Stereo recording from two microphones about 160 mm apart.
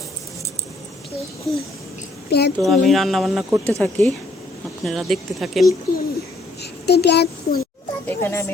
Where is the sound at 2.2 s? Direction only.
90° left.